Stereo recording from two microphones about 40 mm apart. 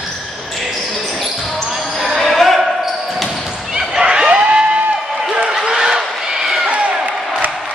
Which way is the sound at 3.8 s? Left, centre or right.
Centre.